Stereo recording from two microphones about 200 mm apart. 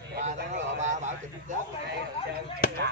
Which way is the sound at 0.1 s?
55° right (ahead or behind).